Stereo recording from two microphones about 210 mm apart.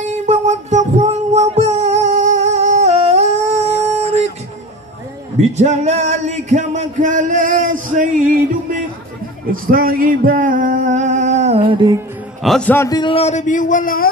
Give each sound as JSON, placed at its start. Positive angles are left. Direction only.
{"t": 0.0, "sound": "music", "side_deg": -35}
{"t": 5.6, "sound": "music", "side_deg": -30}
{"t": 9.5, "sound": "singing", "side_deg": -45}
{"t": 12.4, "sound": "a man's voice", "side_deg": 5}